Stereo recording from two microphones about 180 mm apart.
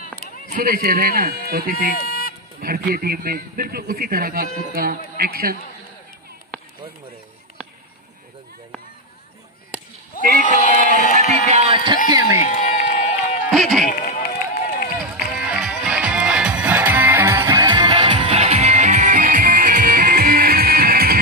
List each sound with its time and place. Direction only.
0.0 s run: 55° left (ahead or behind)
0.6 s a man's voice: 55° right (ahead or behind)
2.0 s a sound: 55° left (ahead or behind)
2.6 s a man's voice: 55° right (ahead or behind)
10.1 s bleat: 50° left (ahead or behind)
10.6 s a sound: 45° left (ahead or behind)
11.4 s a sound: 35° right (ahead or behind); by 12.4 s 20° right (ahead or behind)
12.4 s run: 45° left (ahead or behind)
13.5 s music: centre (ahead or behind)
13.8 s run: 45° left (ahead or behind)
15.0 s music: 5° right (ahead or behind)
17.6 s music: 25° right (ahead or behind); by 21.2 s 55° right (ahead or behind)